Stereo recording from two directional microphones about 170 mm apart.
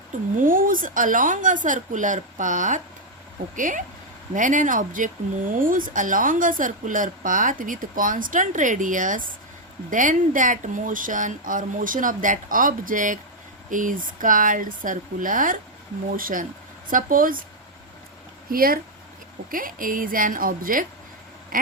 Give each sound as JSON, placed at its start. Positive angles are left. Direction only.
{"t": 0.3, "sound": "speech", "side_deg": -55}
{"t": 18.5, "sound": "speech", "side_deg": -55}
{"t": 21.5, "sound": "quack", "side_deg": -50}